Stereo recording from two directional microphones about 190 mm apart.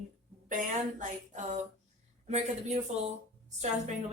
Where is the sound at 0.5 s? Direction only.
40° right (ahead or behind).